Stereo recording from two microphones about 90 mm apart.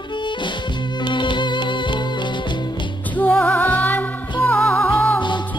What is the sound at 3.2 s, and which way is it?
Music, 20° left (ahead or behind).